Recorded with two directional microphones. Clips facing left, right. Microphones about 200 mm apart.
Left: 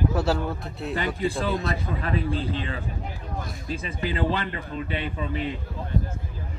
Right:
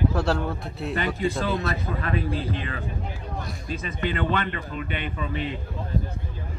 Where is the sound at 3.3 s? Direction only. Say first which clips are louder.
Left 2 dB; centre (ahead or behind).